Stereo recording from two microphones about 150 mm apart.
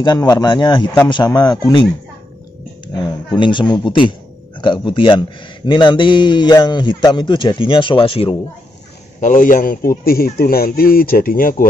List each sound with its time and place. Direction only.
0.0 s speech: 25° left (ahead or behind)
3.3 s a man's voice: 30° left (ahead or behind)
9.2 s a man's voice: 60° left (ahead or behind)